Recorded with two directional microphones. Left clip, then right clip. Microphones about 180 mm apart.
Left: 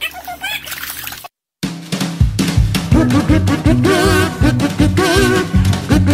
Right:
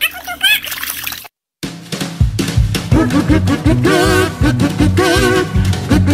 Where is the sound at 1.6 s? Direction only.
Centre (ahead or behind).